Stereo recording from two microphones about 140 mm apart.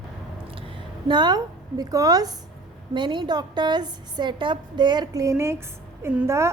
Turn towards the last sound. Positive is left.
turn(degrees=-20)  # may be behind; listen again after turning